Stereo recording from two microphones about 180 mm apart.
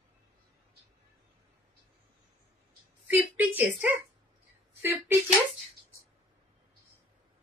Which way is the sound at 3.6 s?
10° right (ahead or behind).